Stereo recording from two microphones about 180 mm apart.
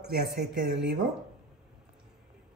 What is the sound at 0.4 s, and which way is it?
Speech, 70° right (ahead or behind).